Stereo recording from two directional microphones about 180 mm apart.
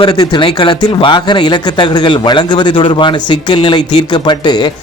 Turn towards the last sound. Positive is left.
turn(degrees=25)  # may be behind; listen again after turning